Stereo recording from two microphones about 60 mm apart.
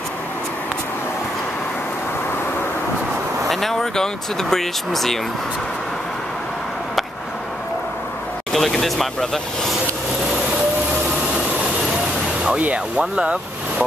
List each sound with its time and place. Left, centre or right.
3.4 s speech: centre
8.5 s speech: centre
12.5 s speech: right